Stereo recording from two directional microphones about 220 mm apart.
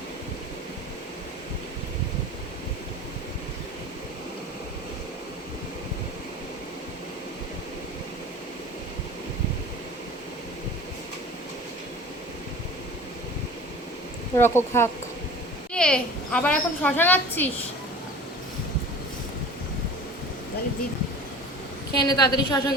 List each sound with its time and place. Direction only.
14.3 s a woman's voice: 10° left (ahead or behind)
21.9 s a woman's voice: 20° left (ahead or behind)